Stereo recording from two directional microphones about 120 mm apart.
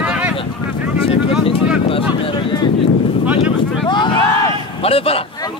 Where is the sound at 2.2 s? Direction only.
40° left (ahead or behind).